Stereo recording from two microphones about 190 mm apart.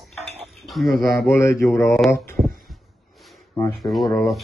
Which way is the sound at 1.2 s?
15° left (ahead or behind).